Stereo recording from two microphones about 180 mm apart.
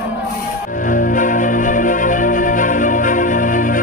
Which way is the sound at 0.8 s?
50° left (ahead or behind).